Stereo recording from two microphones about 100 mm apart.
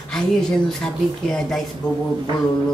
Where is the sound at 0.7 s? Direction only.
5° left (ahead or behind).